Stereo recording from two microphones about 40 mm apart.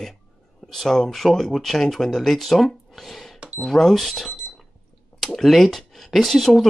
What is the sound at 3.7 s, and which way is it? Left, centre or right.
Speech, centre.